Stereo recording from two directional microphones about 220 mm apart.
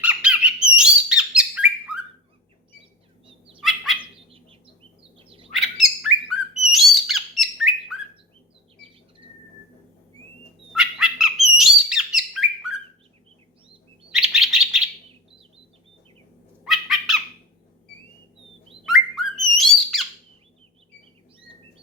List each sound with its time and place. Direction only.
0.0 s squawk: 5° right (ahead or behind)
3.2 s fowl: 25° right (ahead or behind)
3.6 s bird: centre (ahead or behind)
5.1 s bird: 25° right (ahead or behind)
5.5 s bird: centre (ahead or behind)
10.7 s squawk: centre (ahead or behind)
14.1 s bird: centre (ahead or behind)
16.6 s squawk: centre (ahead or behind)
18.9 s bird: centre (ahead or behind)